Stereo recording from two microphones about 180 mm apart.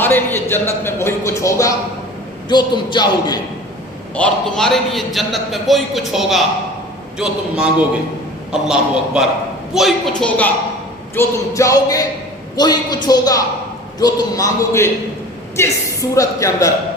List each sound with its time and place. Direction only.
0.0 s speech: 10° left (ahead or behind)
4.1 s a man's voice: 5° left (ahead or behind)